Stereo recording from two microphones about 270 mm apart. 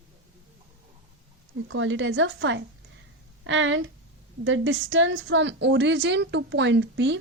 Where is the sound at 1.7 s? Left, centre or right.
Right.